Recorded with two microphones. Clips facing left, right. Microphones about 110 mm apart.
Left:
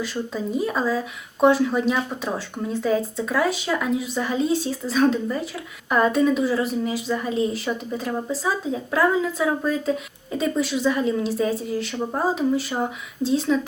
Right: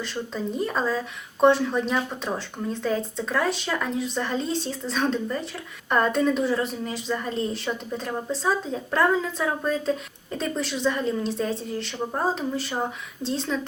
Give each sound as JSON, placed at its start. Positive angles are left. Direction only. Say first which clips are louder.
{"t": 0.0, "sound": "a woman's voice", "louder": "left 3 dB", "side_deg": 5}